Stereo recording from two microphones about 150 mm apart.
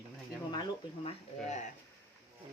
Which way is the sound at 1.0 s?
50° left (ahead or behind).